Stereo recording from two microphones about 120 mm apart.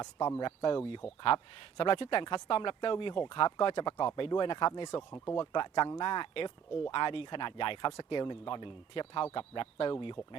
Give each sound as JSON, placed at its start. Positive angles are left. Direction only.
{"t": 0.0, "sound": "speech", "side_deg": 35}
{"t": 1.0, "sound": "speech", "side_deg": 55}